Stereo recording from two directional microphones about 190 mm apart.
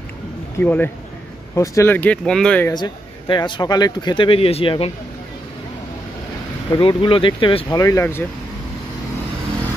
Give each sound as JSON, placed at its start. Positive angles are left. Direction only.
{"t": 0.6, "sound": "speech", "side_deg": 10}
{"t": 2.7, "sound": "speech", "side_deg": 20}
{"t": 6.8, "sound": "speech", "side_deg": 25}